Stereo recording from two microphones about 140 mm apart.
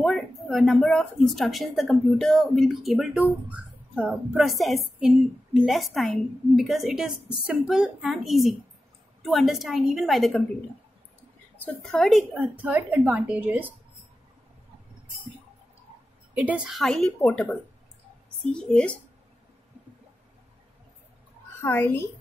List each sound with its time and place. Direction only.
0.0 s speech: centre (ahead or behind)
11.6 s a woman's voice: 10° left (ahead or behind)
12.4 s a woman's voice: 10° right (ahead or behind)
16.3 s speech: 5° right (ahead or behind)
17.3 s a woman's voice: 15° left (ahead or behind)
21.5 s a woman's voice: 15° left (ahead or behind)